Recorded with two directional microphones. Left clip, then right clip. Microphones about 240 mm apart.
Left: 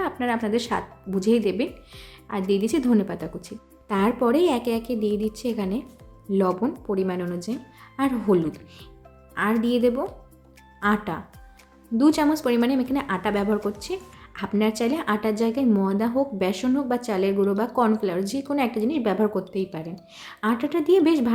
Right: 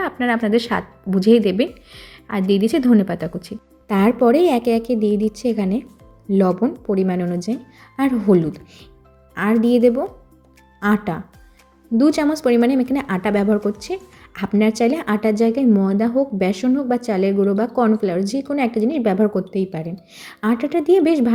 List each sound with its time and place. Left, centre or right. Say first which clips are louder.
0.0 s speech: right 5 dB; centre